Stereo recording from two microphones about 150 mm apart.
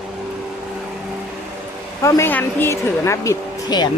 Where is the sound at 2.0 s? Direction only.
20° left (ahead or behind).